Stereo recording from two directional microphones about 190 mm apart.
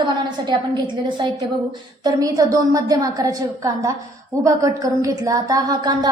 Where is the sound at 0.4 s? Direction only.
25° right (ahead or behind).